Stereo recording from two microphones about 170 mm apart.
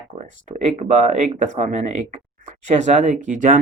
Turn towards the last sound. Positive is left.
turn(degrees=-45)  # may be behind; listen again after turning